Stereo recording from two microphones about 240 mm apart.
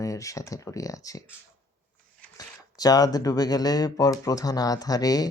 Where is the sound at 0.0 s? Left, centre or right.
Centre.